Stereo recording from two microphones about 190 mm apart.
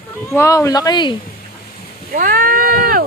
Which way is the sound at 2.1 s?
45° right (ahead or behind).